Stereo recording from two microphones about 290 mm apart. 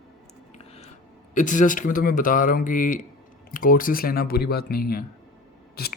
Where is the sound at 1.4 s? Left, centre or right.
Left.